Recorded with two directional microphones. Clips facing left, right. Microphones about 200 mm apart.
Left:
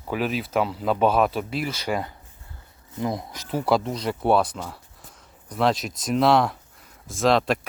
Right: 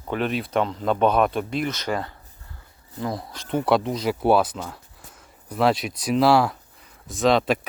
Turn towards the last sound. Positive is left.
turn(degrees=0)  # may be behind; listen again after turning